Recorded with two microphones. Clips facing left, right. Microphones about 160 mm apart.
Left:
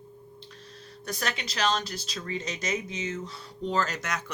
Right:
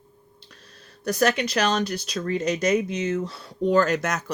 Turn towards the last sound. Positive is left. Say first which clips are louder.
# right 9 dB
turn(degrees=-45)  # may be behind; listen again after turning